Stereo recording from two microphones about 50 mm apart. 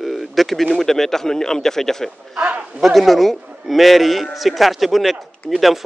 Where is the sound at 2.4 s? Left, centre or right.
Right.